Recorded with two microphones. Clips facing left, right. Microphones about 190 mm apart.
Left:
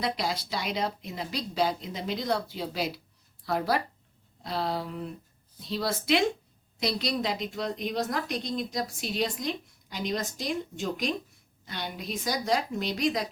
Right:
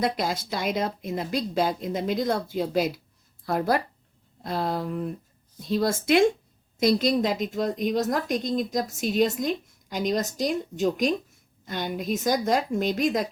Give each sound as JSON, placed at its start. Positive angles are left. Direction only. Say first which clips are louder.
{"t": 0.0, "sound": "a woman's voice", "louder": "right 4 dB", "side_deg": -50}